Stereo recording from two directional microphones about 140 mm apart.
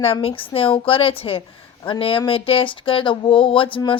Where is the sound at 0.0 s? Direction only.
45° left (ahead or behind).